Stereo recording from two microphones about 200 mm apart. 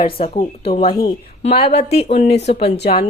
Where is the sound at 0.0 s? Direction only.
25° left (ahead or behind).